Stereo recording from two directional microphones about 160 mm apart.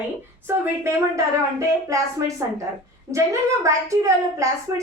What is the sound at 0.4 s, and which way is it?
A woman's voice, 15° right (ahead or behind).